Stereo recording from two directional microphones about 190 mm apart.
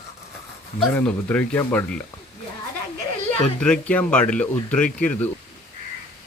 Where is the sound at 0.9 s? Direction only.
10° left (ahead or behind).